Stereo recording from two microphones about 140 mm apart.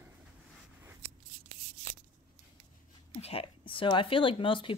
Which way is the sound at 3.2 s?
45° left (ahead or behind).